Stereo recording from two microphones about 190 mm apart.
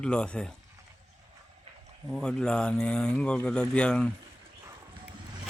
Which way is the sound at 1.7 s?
35° right (ahead or behind).